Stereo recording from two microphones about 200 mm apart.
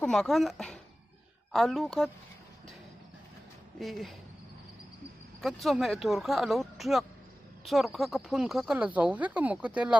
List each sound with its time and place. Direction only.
0.0 s speech: centre (ahead or behind)
3.8 s speech: centre (ahead or behind)
5.4 s a woman's voice: centre (ahead or behind)